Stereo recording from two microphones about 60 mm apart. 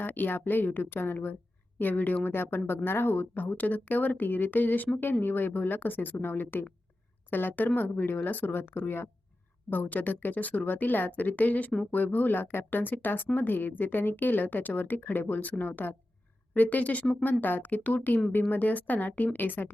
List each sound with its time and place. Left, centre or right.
0.0 s a woman's voice: left